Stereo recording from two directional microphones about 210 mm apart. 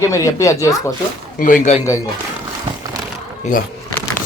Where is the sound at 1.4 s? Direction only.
35° left (ahead or behind).